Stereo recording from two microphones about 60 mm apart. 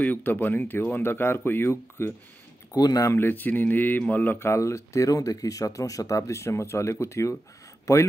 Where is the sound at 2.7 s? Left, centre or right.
Left.